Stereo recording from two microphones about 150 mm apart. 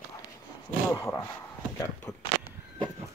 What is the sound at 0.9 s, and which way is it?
Speech, 20° left (ahead or behind).